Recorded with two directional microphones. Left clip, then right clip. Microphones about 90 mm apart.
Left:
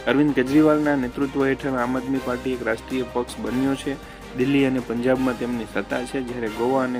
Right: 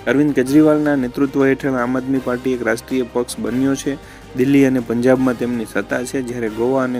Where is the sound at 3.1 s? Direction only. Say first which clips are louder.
Right 5 dB; 45° right (ahead or behind).